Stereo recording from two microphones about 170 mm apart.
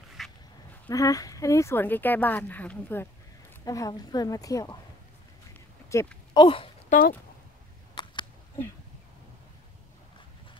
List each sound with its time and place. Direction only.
0.2 s dog: centre (ahead or behind)
0.8 s a woman's voice: 20° left (ahead or behind)
5.9 s a woman's voice: 15° left (ahead or behind)
6.3 s speech: 30° left (ahead or behind)
6.9 s speech: 55° left (ahead or behind)
7.9 s a sound: 25° left (ahead or behind)